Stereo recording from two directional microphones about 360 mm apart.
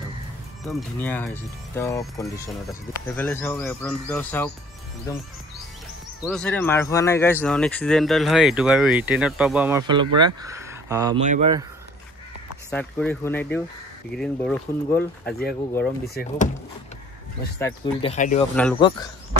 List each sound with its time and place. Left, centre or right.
0.7 s speech: centre
6.2 s speech: centre
12.7 s speech: centre
17.6 s speech: centre
18.1 s speech: centre